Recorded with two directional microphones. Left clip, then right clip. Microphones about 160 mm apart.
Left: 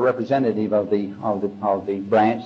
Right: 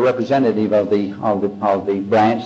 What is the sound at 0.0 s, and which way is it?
A man's voice, 35° right (ahead or behind).